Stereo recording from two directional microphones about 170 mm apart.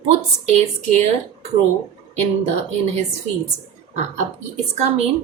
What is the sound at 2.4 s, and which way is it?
Speech, 40° right (ahead or behind).